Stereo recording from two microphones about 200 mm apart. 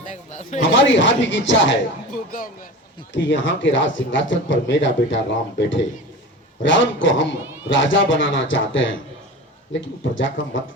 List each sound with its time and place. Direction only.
0.1 s a sound: 35° left (ahead or behind)
0.6 s speech: 70° left (ahead or behind)
3.1 s speech: 65° left (ahead or behind)
10.0 s speech: 65° left (ahead or behind)